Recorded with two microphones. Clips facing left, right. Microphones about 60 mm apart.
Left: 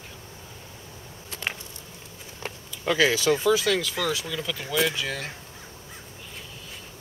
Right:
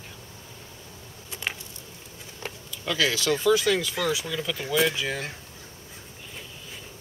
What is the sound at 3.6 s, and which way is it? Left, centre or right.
Speech, centre.